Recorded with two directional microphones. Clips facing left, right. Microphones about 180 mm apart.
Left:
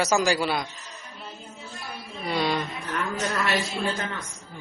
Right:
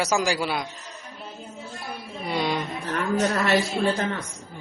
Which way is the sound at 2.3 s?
15° right (ahead or behind).